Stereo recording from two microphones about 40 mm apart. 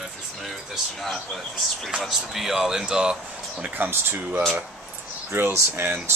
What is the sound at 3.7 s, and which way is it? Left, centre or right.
Speech, right.